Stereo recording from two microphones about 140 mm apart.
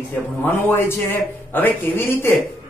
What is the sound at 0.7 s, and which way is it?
A woman's voice, 15° left (ahead or behind).